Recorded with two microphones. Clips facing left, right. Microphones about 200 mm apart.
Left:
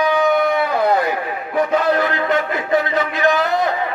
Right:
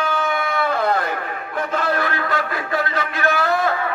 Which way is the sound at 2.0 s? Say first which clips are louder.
Left 5 dB; 20° left (ahead or behind).